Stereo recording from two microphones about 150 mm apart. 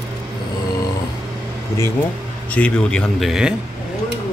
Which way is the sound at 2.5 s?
10° left (ahead or behind).